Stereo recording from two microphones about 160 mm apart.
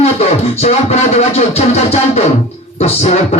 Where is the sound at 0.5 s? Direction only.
40° left (ahead or behind).